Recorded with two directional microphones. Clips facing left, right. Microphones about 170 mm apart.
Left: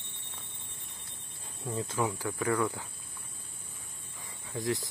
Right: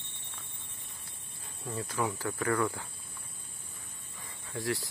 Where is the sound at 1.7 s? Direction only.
20° left (ahead or behind).